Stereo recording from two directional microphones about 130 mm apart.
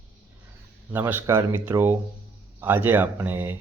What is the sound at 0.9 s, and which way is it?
Speech, 15° right (ahead or behind).